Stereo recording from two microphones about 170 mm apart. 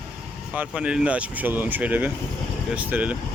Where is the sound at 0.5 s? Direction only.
5° right (ahead or behind).